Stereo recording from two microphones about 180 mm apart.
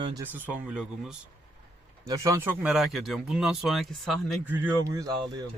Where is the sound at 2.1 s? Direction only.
20° right (ahead or behind).